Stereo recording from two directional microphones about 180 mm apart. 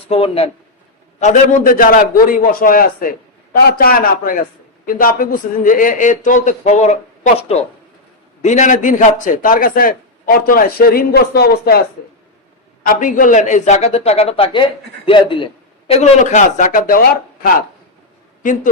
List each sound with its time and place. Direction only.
0.1 s a man's voice: 30° left (ahead or behind)
1.2 s a man's voice: 45° left (ahead or behind)
12.8 s a man's voice: 50° left (ahead or behind); by 15.4 s 30° left (ahead or behind)
15.9 s a man's voice: 40° left (ahead or behind); by 17.5 s 55° left (ahead or behind)